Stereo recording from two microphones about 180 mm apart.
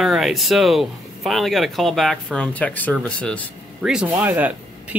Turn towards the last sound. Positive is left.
turn(degrees=-10)  # may be behind; listen again after turning